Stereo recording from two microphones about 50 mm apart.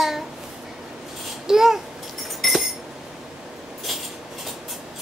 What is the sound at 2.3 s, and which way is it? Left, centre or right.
Alarm clock, centre.